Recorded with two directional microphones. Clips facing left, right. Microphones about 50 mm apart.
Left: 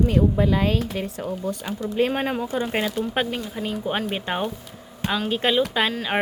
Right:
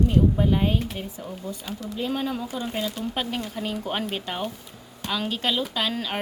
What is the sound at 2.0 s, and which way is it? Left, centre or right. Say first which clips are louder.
Speech: left 5 dB; left.